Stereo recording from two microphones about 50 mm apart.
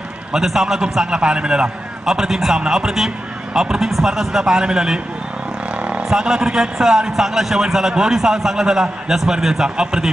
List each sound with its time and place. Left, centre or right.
0.3 s a man's voice: centre
5.8 s vehicle: right
6.0 s a man's voice: centre